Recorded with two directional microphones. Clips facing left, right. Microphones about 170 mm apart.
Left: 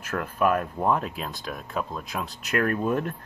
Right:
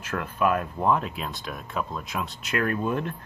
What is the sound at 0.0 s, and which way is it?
Speech, 40° left (ahead or behind).